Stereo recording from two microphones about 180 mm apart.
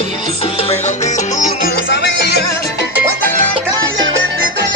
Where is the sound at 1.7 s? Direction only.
70° left (ahead or behind).